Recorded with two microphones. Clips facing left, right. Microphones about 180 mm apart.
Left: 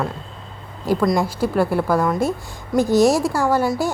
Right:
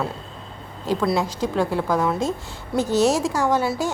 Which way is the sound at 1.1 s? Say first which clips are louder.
Left 3 dB; 10° left (ahead or behind).